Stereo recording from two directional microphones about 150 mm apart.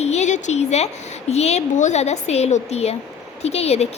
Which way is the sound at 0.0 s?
50° left (ahead or behind).